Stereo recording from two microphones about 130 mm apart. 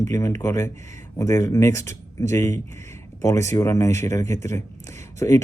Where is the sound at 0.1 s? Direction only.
25° left (ahead or behind).